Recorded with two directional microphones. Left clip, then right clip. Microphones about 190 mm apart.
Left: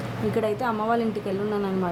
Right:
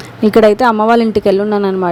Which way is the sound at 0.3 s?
50° right (ahead or behind).